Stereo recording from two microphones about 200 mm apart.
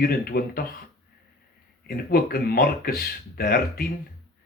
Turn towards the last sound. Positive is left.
turn(degrees=45)  # may be behind; listen again after turning